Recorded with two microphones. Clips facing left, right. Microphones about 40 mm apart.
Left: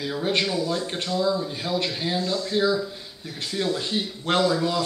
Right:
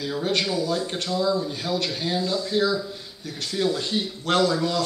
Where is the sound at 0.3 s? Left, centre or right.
Centre.